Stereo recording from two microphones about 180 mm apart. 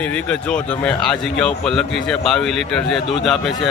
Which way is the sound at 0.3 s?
5° left (ahead or behind).